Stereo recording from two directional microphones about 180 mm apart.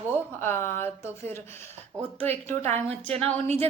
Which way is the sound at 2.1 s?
35° right (ahead or behind).